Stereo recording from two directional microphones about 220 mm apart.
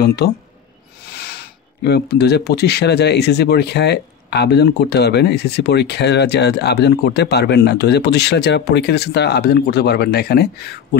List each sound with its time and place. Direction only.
0.0 s speech: 45° left (ahead or behind)